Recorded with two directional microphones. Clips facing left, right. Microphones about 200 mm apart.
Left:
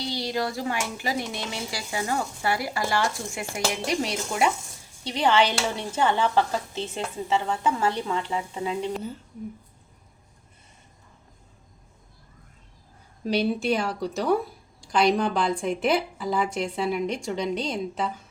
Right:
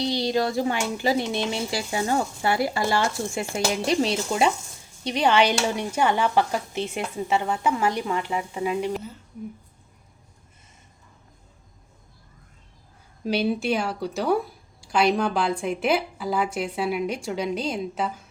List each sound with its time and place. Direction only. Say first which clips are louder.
0.0 s speech: right 5 dB; 20° right (ahead or behind)
13.2 s a woman's voice: even; centre (ahead or behind)